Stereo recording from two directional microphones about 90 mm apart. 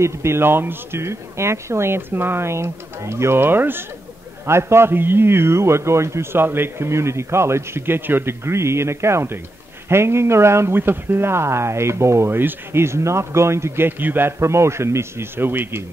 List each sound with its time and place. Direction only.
0.0 s speech: 30° right (ahead or behind)